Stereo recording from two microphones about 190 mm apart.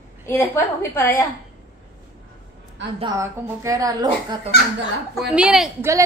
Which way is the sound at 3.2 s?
15° right (ahead or behind).